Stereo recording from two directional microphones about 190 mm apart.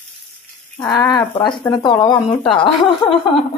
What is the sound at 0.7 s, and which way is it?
Speech, 20° left (ahead or behind).